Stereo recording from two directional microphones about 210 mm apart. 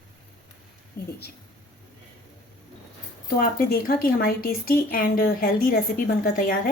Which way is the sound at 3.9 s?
45° left (ahead or behind).